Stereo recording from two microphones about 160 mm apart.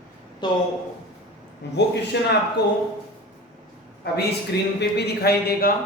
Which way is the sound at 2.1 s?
90° left.